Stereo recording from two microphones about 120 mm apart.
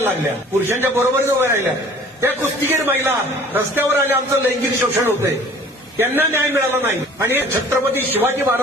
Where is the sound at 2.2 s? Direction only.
20° right (ahead or behind).